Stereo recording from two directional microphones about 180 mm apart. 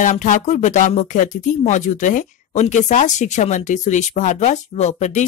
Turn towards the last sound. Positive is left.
turn(degrees=40)  # may be behind; listen again after turning